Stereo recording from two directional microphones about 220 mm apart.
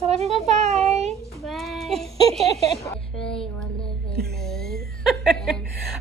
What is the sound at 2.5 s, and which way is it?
Speech, 30° right (ahead or behind).